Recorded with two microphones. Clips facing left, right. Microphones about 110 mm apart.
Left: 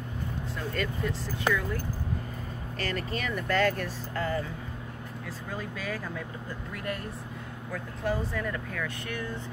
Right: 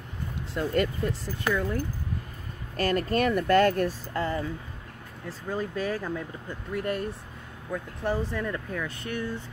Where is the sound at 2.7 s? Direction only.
45° right (ahead or behind).